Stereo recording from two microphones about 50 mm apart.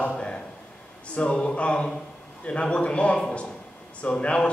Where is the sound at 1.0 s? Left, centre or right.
Left.